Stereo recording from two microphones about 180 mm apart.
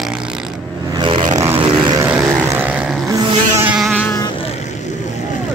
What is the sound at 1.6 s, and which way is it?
Vehicle, 25° right (ahead or behind).